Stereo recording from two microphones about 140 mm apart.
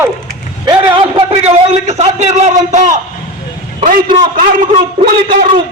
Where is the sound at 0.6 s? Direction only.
35° right (ahead or behind); by 2.9 s 60° right (ahead or behind).